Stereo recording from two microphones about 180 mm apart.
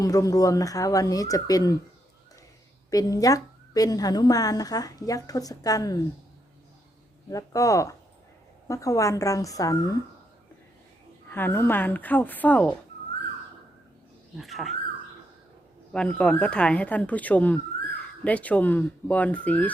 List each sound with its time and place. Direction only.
0.0 s a woman's voice: 20° left (ahead or behind)
2.9 s a woman's voice: 20° left (ahead or behind)
7.3 s a woman's voice: 20° left (ahead or behind)
11.3 s speech: 10° left (ahead or behind)
14.3 s speech: centre (ahead or behind)
15.9 s speech: 5° left (ahead or behind)